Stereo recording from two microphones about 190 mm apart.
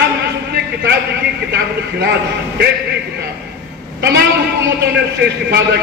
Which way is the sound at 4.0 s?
60° right (ahead or behind).